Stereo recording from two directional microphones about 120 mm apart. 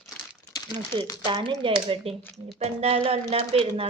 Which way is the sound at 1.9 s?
55° right (ahead or behind).